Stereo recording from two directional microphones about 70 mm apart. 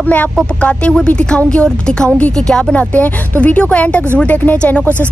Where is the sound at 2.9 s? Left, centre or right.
Left.